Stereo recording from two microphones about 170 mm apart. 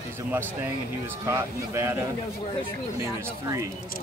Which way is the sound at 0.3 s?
10° right (ahead or behind).